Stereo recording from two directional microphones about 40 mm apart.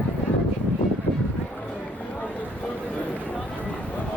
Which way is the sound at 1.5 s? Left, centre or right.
Left.